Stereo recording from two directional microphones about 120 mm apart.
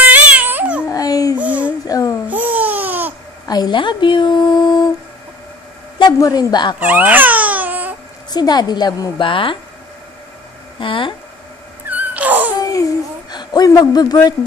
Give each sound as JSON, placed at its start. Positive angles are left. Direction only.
{"t": 0.0, "sound": "a sound", "side_deg": -15}
{"t": 0.8, "sound": "babbling", "side_deg": 30}
{"t": 1.4, "sound": "a sound", "side_deg": -10}
{"t": 1.9, "sound": "babbling", "side_deg": 30}
{"t": 2.2, "sound": "a sound", "side_deg": -15}
{"t": 3.4, "sound": "speech", "side_deg": 35}
{"t": 5.9, "sound": "a woman's voice", "side_deg": 35}
{"t": 6.8, "sound": "baby cry", "side_deg": -15}
{"t": 8.3, "sound": "a woman's voice", "side_deg": 35}
{"t": 10.8, "sound": "speech", "side_deg": 45}
{"t": 12.0, "sound": "wail", "side_deg": -15}
{"t": 13.3, "sound": "speech", "side_deg": 35}